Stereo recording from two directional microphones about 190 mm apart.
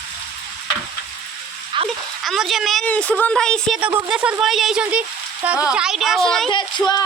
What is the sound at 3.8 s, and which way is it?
A woman's voice, 10° right (ahead or behind).